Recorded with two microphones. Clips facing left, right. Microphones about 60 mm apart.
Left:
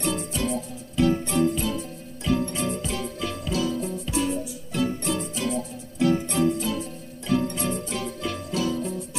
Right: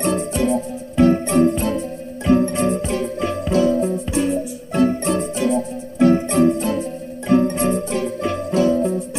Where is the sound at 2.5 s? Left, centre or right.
Right.